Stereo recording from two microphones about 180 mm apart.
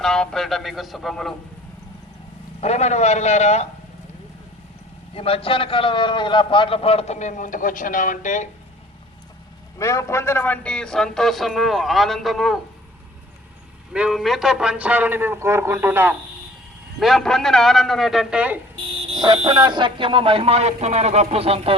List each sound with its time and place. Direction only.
0.0 s a man's voice: 5° left (ahead or behind)
2.6 s a man's voice: 40° left (ahead or behind)
5.1 s a man's voice: 30° left (ahead or behind)
9.7 s a man's voice: 15° left (ahead or behind); by 12.5 s centre (ahead or behind)
13.9 s a man's voice: 5° right (ahead or behind)
17.0 s a man's voice: centre (ahead or behind)
19.0 s fire alarm: 25° right (ahead or behind)
19.4 s speech: 25° right (ahead or behind)